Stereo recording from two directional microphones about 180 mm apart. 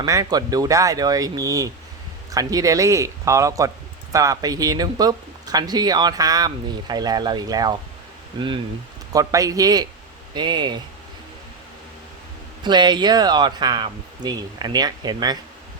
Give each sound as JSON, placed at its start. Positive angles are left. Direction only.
{"t": 0.0, "sound": "speech", "side_deg": -20}
{"t": 12.6, "sound": "speech", "side_deg": -25}